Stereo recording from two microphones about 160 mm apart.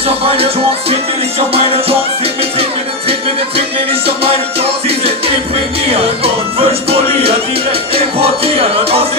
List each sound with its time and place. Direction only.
0.0 s music: 35° right (ahead or behind)
3.1 s music: 35° right (ahead or behind)